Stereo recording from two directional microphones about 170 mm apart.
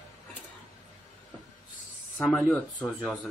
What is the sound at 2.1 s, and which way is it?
Speech, 10° left (ahead or behind).